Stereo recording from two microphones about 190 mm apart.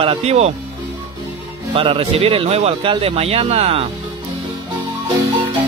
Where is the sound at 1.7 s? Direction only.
30° right (ahead or behind).